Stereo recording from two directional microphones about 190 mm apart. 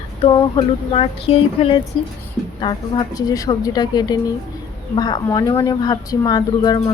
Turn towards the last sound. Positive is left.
turn(degrees=20)  # may be behind; listen again after turning